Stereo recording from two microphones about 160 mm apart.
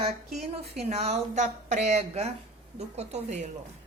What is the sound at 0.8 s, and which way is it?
A woman's voice, 40° right (ahead or behind).